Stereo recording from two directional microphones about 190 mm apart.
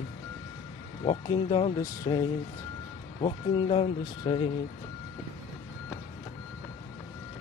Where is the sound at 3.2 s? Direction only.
25° left (ahead or behind).